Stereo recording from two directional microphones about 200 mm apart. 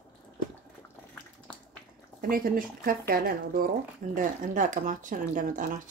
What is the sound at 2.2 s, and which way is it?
Speech, 45° right (ahead or behind).